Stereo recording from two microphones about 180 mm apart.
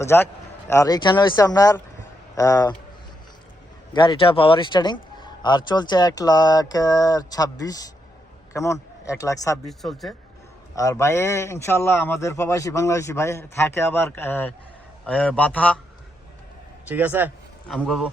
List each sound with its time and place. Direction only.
0.0 s a man's voice: 15° left (ahead or behind)
3.9 s a man's voice: 25° left (ahead or behind)
9.6 s speech: centre (ahead or behind)
10.8 s a man's voice: 15° left (ahead or behind)
16.9 s speech: 10° right (ahead or behind)
17.7 s speech: centre (ahead or behind)